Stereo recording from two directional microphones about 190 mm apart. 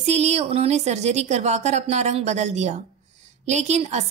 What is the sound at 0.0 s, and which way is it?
Speech, 35° right (ahead or behind).